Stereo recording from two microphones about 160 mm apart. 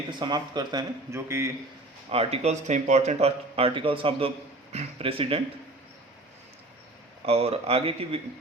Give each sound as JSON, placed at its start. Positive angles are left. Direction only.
{"t": 0.2, "sound": "speech", "side_deg": -25}
{"t": 2.0, "sound": "speech", "side_deg": -40}
{"t": 7.3, "sound": "speech", "side_deg": -40}